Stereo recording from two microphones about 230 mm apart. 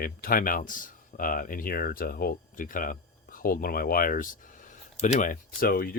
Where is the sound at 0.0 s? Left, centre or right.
Left.